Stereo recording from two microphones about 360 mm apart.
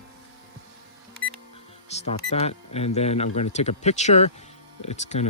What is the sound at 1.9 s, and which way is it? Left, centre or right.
Speech, centre.